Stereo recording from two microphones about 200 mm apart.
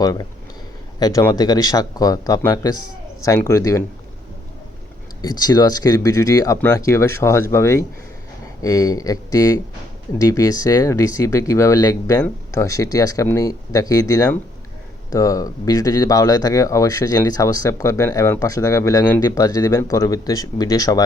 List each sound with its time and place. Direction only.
0.0 s speech: 20° left (ahead or behind)
5.2 s speech: 20° left (ahead or behind)